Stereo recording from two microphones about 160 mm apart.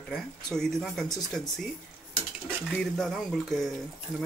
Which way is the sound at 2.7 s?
Centre (ahead or behind).